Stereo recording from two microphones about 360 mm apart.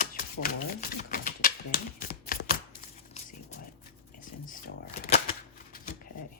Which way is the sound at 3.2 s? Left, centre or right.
Left.